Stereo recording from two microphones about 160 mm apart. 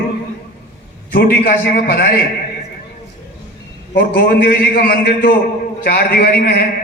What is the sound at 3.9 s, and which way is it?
A man's voice, 80° left.